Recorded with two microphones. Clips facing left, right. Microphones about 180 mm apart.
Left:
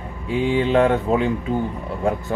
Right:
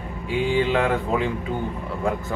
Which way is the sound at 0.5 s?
40° left (ahead or behind).